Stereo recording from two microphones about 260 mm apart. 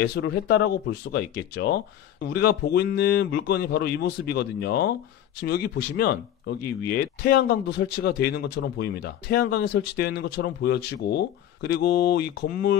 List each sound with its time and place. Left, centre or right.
0.1 s speech: left